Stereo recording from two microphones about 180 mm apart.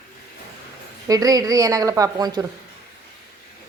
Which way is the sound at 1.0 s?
20° right (ahead or behind).